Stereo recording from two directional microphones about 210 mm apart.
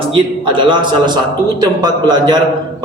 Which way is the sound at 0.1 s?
25° right (ahead or behind).